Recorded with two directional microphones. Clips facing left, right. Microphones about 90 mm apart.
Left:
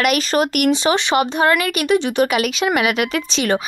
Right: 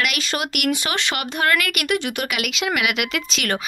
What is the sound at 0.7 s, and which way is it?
Speech, 20° left (ahead or behind).